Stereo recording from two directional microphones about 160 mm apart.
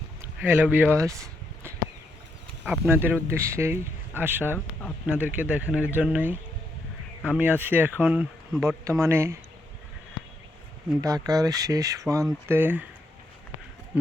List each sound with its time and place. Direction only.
0.4 s speech: 10° right (ahead or behind)
0.9 s a sound: 20° right (ahead or behind)
2.6 s speech: 10° right (ahead or behind)
11.0 s speech: 20° right (ahead or behind)